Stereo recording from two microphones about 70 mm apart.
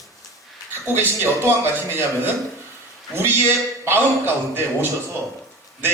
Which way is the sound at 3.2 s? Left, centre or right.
Right.